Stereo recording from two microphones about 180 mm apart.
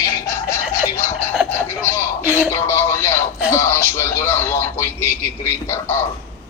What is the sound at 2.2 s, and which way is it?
Music, 5° right (ahead or behind).